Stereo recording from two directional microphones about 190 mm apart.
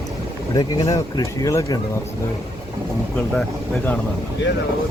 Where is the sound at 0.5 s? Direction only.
20° left (ahead or behind).